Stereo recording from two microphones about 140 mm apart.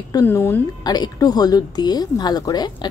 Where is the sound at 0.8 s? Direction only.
30° left (ahead or behind).